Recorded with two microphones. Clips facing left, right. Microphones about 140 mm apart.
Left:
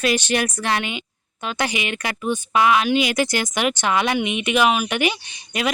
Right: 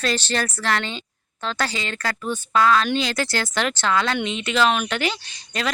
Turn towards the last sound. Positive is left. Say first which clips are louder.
# left 2 dB
turn(degrees=15)  # may be behind; listen again after turning